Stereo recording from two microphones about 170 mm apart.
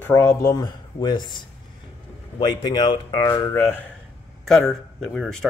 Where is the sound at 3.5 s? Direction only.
15° left (ahead or behind).